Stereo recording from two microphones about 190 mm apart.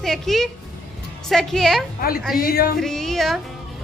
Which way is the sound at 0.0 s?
Centre (ahead or behind).